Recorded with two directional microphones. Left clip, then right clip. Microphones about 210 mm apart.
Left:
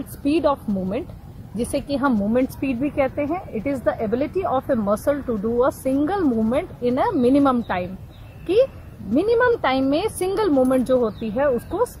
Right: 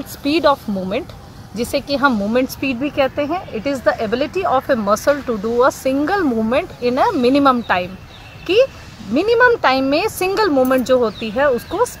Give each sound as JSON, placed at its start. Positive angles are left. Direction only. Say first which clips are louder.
{"t": 0.2, "sound": "speech", "louder": "right 5 dB", "side_deg": 0}
{"t": 9.1, "sound": "speech", "louder": "right 5 dB", "side_deg": 0}